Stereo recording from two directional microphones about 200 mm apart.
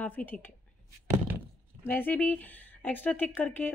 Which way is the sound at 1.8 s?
10° left (ahead or behind).